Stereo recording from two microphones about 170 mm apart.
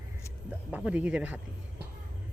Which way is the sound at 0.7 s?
10° right (ahead or behind).